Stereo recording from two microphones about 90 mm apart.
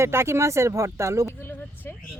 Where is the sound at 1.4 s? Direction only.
25° left (ahead or behind).